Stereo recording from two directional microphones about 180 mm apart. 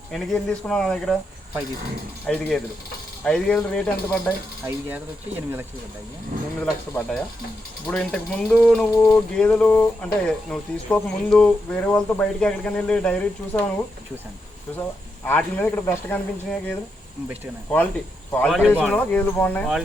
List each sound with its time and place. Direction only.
0.1 s speech: centre (ahead or behind)
2.2 s speech: 5° left (ahead or behind)
4.6 s mechanisms: 10° right (ahead or behind)
6.6 s speech: 10° left (ahead or behind)
14.8 s speech: 10° left (ahead or behind)
18.3 s speech: 5° left (ahead or behind)